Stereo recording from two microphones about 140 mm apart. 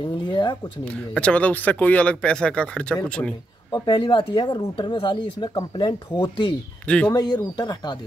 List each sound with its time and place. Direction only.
0.0 s speech: 35° left (ahead or behind)
0.8 s speech: 10° left (ahead or behind)
3.7 s speech: 35° left (ahead or behind)
6.9 s speech: 10° left (ahead or behind)
7.2 s speech: 30° left (ahead or behind)